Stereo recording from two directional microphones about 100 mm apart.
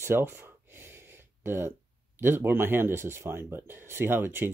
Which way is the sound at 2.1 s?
20° right (ahead or behind).